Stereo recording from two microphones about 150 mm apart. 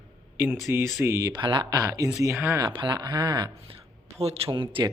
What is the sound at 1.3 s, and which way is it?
Speech, 30° right (ahead or behind).